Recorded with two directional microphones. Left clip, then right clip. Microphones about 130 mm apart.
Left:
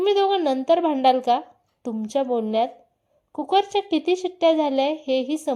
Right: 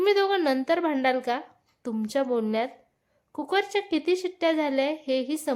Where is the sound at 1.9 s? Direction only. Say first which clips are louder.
Left 3 dB; 5° left (ahead or behind).